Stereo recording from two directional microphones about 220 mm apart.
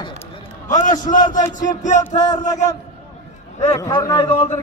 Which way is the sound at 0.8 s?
35° left (ahead or behind).